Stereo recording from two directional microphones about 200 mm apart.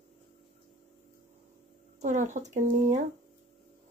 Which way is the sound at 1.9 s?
35° right (ahead or behind).